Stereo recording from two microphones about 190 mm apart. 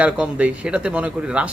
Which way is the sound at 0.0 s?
5° right (ahead or behind).